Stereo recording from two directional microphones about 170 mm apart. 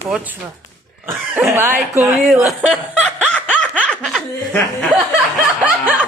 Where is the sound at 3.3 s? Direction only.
5° left (ahead or behind).